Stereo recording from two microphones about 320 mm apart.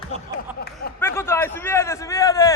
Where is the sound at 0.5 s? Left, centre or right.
Left.